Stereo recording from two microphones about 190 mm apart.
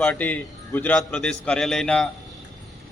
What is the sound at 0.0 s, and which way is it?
A man's voice, 10° left (ahead or behind).